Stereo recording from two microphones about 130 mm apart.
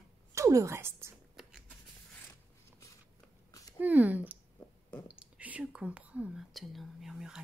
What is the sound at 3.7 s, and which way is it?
Speech, 15° right (ahead or behind).